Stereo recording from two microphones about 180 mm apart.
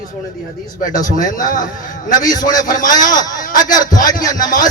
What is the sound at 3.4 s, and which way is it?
A man's voice, 50° left (ahead or behind).